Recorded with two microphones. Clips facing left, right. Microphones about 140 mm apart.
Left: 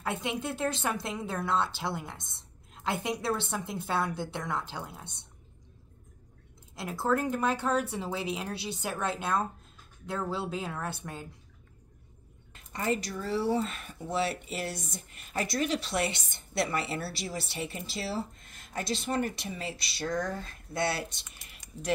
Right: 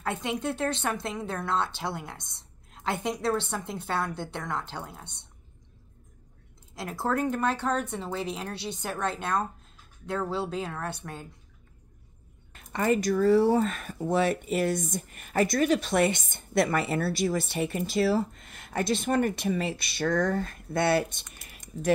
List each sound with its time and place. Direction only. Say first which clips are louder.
0.0 s a woman's voice: right 3 dB; centre (ahead or behind)
6.7 s a woman's voice: even; centre (ahead or behind)
12.7 s speech: right 7 dB; 60° right (ahead or behind)
18.4 s speech: right 7 dB; 70° right (ahead or behind)